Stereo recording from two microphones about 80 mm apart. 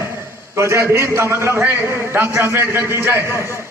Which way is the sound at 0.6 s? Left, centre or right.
Right.